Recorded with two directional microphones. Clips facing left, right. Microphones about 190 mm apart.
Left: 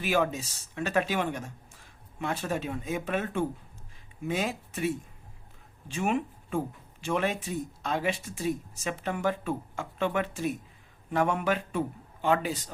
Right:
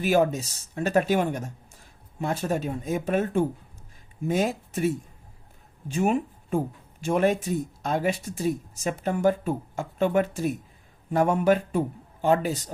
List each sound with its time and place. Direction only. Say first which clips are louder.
0.0 s speech: right 5 dB; 40° right (ahead or behind)
5.9 s speech: right 5 dB; 40° right (ahead or behind)